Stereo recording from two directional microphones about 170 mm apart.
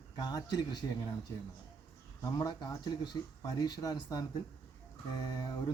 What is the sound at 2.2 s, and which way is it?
Speech, 20° left (ahead or behind).